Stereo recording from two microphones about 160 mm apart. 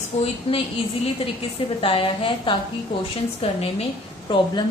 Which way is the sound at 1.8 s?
35° left (ahead or behind).